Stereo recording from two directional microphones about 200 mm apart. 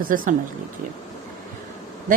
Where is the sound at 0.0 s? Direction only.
45° right (ahead or behind).